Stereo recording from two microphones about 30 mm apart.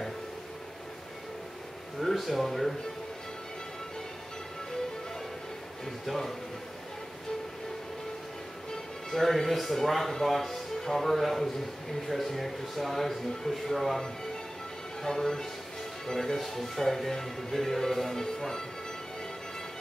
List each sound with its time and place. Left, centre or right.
2.0 s speech: centre
9.1 s a man's voice: centre
15.0 s speech: centre